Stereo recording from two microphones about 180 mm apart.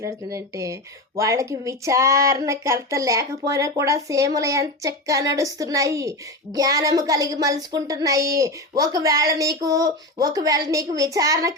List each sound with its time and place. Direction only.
0.0 s speech: 20° right (ahead or behind)